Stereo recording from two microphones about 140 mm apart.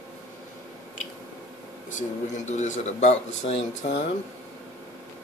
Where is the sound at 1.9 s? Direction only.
60° left (ahead or behind).